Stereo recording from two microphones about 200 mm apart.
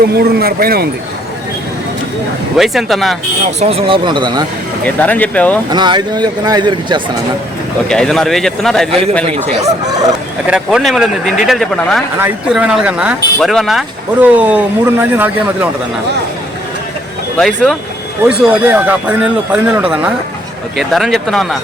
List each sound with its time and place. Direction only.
0.1 s speech: 50° right (ahead or behind)
2.6 s speech: centre (ahead or behind)
3.6 s speech: 30° right (ahead or behind)
4.9 s speech: 5° left (ahead or behind)
5.7 s speech: 20° right (ahead or behind)
7.9 s speech: 5° left (ahead or behind)
8.9 s a man's voice: 30° right (ahead or behind)
10.4 s speech: 5° right (ahead or behind)
17.3 s speech: 5° left (ahead or behind)
18.2 s speech: 10° right (ahead or behind)